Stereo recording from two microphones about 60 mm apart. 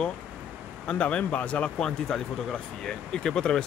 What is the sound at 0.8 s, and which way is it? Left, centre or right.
Speech, left.